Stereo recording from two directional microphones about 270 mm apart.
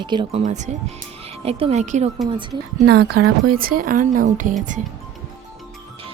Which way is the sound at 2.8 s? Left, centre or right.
Right.